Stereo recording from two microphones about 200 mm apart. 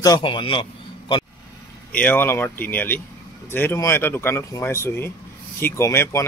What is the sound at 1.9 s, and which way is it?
Speech, 5° left (ahead or behind).